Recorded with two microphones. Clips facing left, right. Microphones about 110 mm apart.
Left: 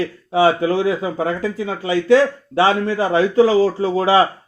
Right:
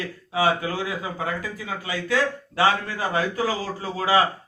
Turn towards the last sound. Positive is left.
turn(degrees=25)  # may be behind; listen again after turning